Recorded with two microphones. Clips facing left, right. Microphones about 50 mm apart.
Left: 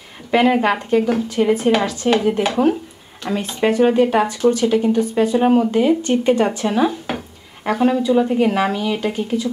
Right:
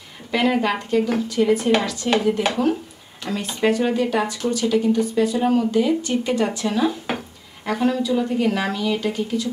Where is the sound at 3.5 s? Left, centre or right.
Left.